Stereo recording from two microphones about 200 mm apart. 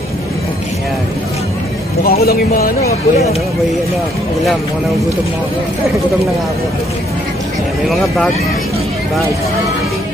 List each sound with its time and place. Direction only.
2.0 s speech: 50° left (ahead or behind)